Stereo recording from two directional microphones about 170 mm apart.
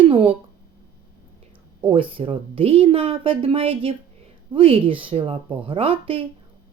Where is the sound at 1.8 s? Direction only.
30° right (ahead or behind).